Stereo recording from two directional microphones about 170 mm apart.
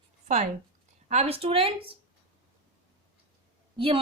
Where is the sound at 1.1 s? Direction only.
40° right (ahead or behind).